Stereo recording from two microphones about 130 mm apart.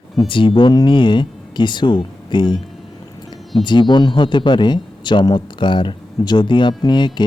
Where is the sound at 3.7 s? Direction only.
35° left (ahead or behind).